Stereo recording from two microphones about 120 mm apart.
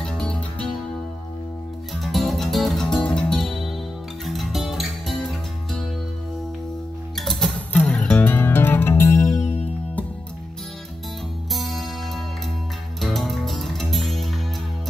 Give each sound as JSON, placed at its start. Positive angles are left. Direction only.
{"t": 0.0, "sound": "music", "side_deg": 5}
{"t": 2.0, "sound": "music", "side_deg": 0}
{"t": 7.2, "sound": "music", "side_deg": 0}
{"t": 11.5, "sound": "music", "side_deg": 0}